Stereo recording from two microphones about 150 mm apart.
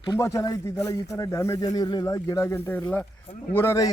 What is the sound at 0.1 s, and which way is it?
A man's voice, 20° left (ahead or behind).